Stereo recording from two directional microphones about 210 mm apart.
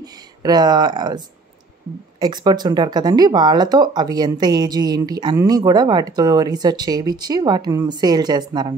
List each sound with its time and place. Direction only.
0.0 s speech: 20° right (ahead or behind)